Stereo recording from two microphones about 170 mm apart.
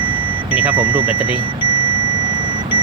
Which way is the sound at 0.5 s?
10° right (ahead or behind).